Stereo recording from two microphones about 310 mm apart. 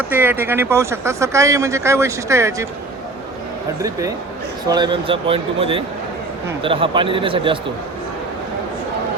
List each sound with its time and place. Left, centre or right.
0.1 s speech: centre
4.7 s speech: centre